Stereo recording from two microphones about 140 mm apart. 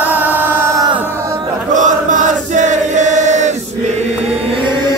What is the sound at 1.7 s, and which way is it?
Chant, 65° right (ahead or behind).